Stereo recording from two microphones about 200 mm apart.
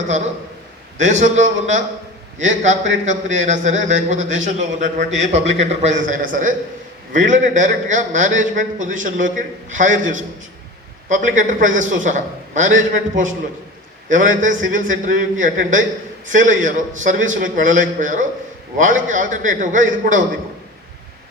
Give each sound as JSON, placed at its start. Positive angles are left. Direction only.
{"t": 0.9, "sound": "a man's voice", "side_deg": -35}